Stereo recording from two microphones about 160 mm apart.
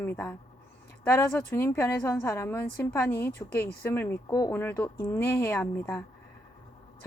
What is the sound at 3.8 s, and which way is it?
Speech, 15° left (ahead or behind).